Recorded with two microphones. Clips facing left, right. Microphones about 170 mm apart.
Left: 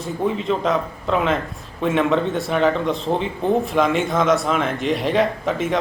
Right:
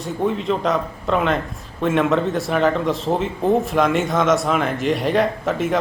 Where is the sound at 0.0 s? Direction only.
Centre (ahead or behind).